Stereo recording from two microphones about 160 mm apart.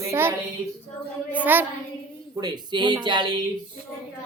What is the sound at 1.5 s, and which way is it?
Speech, 10° right (ahead or behind).